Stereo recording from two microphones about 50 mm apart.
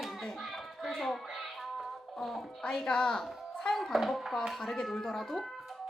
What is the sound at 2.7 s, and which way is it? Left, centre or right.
A child's voice, centre.